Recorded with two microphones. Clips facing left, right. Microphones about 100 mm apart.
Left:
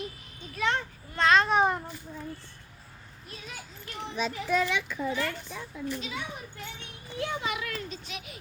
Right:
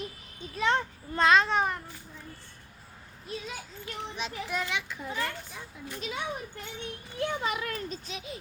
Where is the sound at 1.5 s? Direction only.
15° left (ahead or behind).